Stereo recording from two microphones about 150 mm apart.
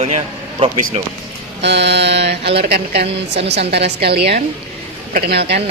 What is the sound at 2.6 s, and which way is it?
Speech, 90° right.